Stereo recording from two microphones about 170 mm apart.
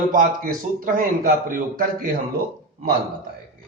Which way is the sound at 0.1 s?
55° right (ahead or behind).